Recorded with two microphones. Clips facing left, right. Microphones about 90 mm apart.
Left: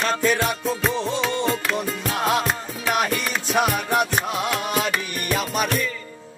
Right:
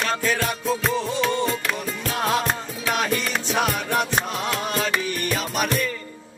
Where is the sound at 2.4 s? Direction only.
5° left (ahead or behind).